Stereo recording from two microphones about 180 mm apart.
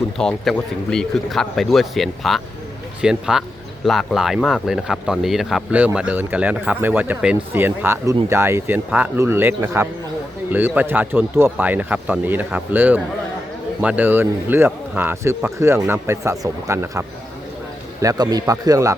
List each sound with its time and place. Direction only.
0.2 s speech: 5° left (ahead or behind); by 18.9 s 20° right (ahead or behind)